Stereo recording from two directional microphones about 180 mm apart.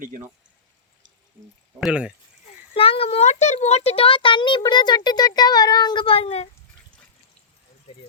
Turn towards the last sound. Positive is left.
turn(degrees=35)  # may be behind; listen again after turning